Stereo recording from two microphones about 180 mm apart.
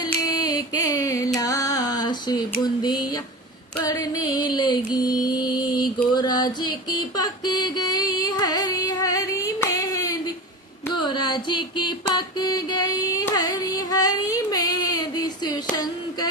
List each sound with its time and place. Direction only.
0.0 s music: 20° left (ahead or behind)